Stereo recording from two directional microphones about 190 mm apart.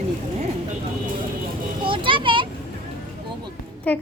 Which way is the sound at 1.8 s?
25° right (ahead or behind).